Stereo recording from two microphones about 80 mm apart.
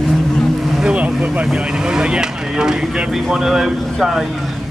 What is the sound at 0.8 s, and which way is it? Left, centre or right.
Vehicle, centre.